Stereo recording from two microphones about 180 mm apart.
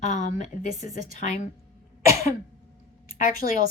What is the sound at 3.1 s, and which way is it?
Speech, 50° left (ahead or behind).